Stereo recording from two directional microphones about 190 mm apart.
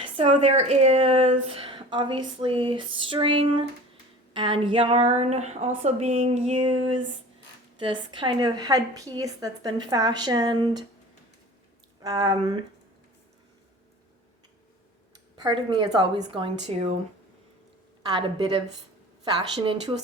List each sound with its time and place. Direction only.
0.0 s a woman's voice: 30° right (ahead or behind)
7.8 s a woman's voice: 25° right (ahead or behind)
12.0 s a woman's voice: 20° right (ahead or behind)
15.4 s a woman's voice: 25° right (ahead or behind)
18.1 s a woman's voice: 25° right (ahead or behind)